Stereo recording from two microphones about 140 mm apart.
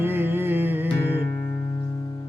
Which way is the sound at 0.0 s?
15° right (ahead or behind).